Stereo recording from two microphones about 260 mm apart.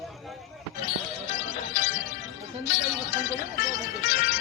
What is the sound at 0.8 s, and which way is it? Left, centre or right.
Music, left.